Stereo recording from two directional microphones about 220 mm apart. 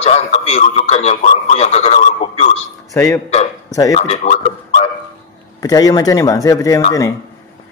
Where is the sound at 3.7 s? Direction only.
15° left (ahead or behind).